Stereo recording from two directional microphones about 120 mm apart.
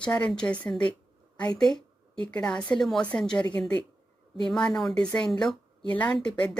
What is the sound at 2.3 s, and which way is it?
Speech, 10° left (ahead or behind).